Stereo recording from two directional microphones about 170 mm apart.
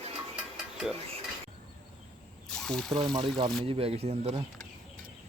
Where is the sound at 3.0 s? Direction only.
25° right (ahead or behind).